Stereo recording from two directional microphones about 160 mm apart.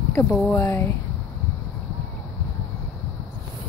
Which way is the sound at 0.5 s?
20° left (ahead or behind).